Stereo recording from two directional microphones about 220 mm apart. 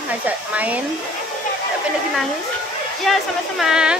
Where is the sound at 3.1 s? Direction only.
Centre (ahead or behind).